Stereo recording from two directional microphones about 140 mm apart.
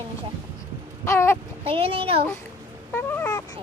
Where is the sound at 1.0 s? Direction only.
20° left (ahead or behind).